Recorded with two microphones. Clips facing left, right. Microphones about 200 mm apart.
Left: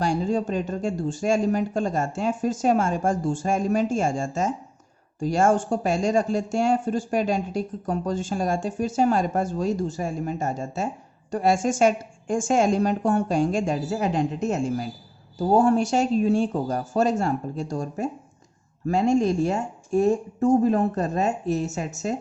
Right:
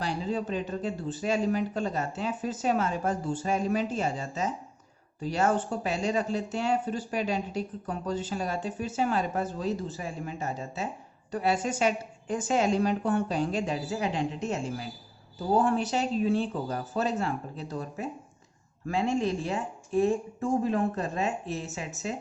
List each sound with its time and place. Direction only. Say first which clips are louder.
0.0 s speech: left 7 dB; 45° left (ahead or behind)